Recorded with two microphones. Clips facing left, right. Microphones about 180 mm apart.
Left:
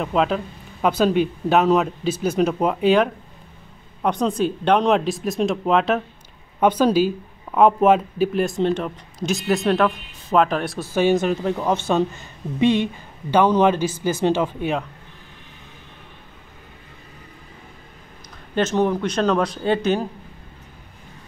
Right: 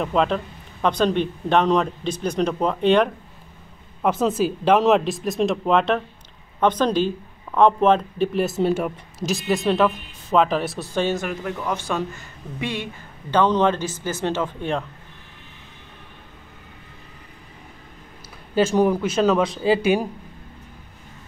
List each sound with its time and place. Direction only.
0.0 s speech: centre (ahead or behind)
11.1 s speech: 25° left (ahead or behind)
13.3 s speech: 10° left (ahead or behind)
18.5 s speech: 10° right (ahead or behind)